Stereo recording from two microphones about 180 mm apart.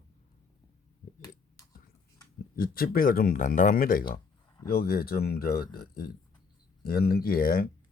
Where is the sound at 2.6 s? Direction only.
55° left (ahead or behind).